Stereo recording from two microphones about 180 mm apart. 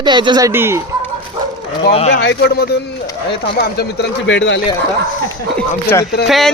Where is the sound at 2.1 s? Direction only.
70° left (ahead or behind).